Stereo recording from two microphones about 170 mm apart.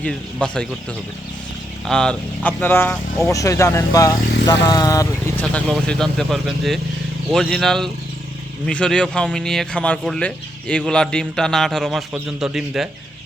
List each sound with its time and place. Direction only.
0.0 s speech: 5° left (ahead or behind)
1.9 s speech: 5° left (ahead or behind)
5.4 s speech: 5° left (ahead or behind)